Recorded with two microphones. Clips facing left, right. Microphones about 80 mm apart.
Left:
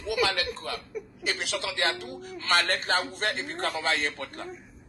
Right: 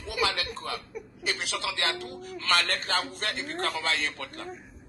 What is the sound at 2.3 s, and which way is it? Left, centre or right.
A man's voice, left.